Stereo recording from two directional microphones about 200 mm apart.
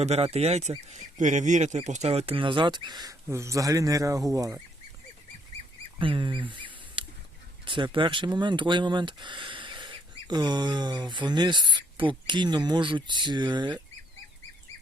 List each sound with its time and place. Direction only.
0.0 s speech: 30° right (ahead or behind); by 4.6 s 15° right (ahead or behind)
6.0 s speech: 25° right (ahead or behind)